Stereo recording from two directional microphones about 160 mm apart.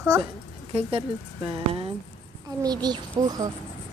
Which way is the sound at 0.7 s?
35° right (ahead or behind).